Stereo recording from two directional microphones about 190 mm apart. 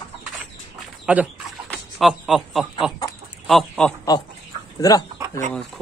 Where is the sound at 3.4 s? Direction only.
Centre (ahead or behind).